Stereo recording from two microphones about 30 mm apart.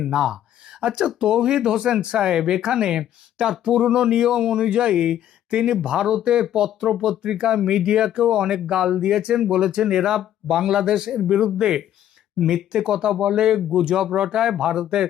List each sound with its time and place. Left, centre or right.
0.1 s speech: centre
0.8 s speech: right
9.0 s speech: right
12.4 s speech: centre